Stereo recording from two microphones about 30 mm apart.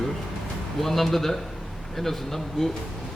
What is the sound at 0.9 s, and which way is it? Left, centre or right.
Speech, centre.